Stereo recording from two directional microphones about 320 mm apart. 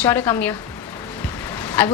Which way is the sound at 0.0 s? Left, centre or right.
Centre.